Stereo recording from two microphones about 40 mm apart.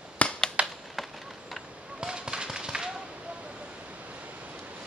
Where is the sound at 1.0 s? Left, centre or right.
Centre.